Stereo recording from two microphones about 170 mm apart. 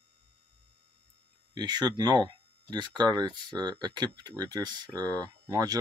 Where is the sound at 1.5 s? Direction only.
25° right (ahead or behind).